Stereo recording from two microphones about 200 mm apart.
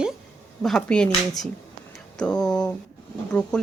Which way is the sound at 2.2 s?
5° left (ahead or behind).